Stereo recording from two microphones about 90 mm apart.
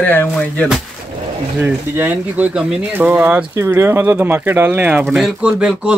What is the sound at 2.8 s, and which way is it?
Speech, 20° right (ahead or behind).